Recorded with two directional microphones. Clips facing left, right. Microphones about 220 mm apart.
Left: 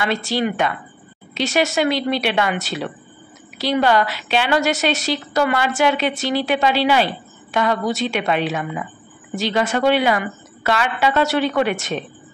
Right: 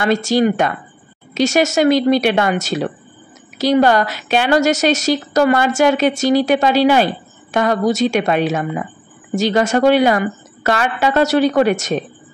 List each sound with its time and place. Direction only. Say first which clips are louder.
0.0 s a woman's voice: right 6 dB; 45° right (ahead or behind)